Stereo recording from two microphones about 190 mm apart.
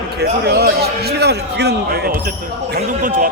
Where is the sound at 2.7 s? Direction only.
45° right (ahead or behind).